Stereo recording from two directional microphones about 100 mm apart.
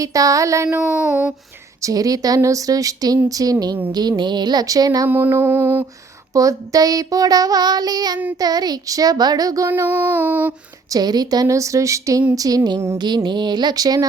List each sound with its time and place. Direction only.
0.0 s child singing: 35° right (ahead or behind)
0.8 s child singing: 15° right (ahead or behind)
1.8 s child singing: 35° right (ahead or behind)
5.0 s mantra: 20° right (ahead or behind)
6.3 s child singing: 35° right (ahead or behind)
9.8 s child singing: 20° right (ahead or behind)
10.9 s child singing: 40° right (ahead or behind)
13.0 s a sound: 45° right (ahead or behind)